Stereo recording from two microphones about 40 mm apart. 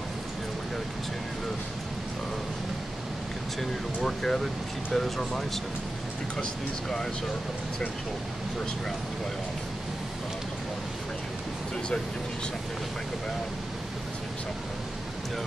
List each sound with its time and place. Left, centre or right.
4.0 s speech: centre
6.4 s speech: centre